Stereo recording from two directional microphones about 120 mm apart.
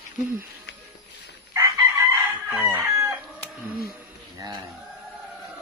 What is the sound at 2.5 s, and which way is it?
Crowing, 20° right (ahead or behind).